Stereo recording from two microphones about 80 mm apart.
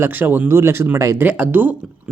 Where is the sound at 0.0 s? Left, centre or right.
Right.